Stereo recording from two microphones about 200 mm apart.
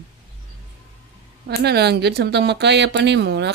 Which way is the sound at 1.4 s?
55° right (ahead or behind).